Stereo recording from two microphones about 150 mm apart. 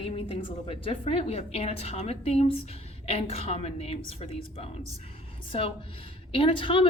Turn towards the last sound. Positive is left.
turn(degrees=35)  # may be behind; listen again after turning